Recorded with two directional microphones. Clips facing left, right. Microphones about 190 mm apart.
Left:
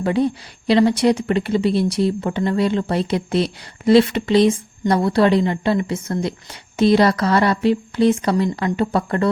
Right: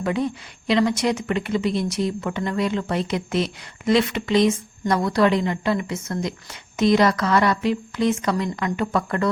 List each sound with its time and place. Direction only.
0.0 s a woman's voice: 30° left (ahead or behind)